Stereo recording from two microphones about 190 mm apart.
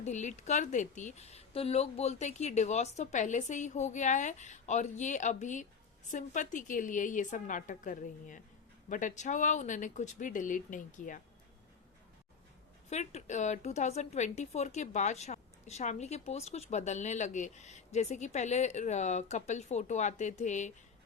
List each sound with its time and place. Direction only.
0.0 s a woman's voice: 40° left (ahead or behind)
12.9 s a woman's voice: 35° left (ahead or behind)